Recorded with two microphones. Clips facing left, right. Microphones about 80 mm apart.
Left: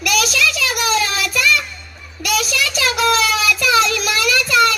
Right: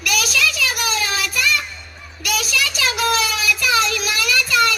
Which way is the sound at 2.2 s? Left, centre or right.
Left.